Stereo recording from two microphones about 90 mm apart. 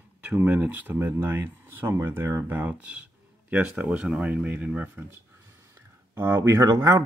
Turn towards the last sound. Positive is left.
turn(degrees=-40)  # may be behind; listen again after turning